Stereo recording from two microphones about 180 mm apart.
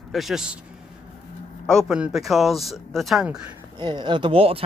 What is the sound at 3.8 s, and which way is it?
Speech, 25° right (ahead or behind).